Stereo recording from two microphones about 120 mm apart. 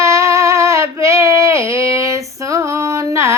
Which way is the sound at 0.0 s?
25° right (ahead or behind).